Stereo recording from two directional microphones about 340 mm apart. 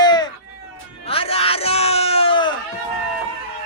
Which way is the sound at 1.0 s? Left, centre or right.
Centre.